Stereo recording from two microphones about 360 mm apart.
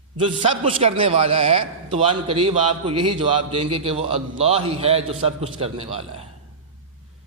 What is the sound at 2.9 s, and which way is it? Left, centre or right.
Speech, right.